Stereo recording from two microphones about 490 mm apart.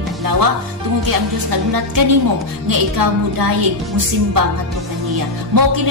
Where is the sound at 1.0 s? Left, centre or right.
Right.